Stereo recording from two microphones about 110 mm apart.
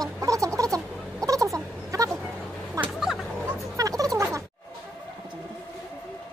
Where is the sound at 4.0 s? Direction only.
30° right (ahead or behind).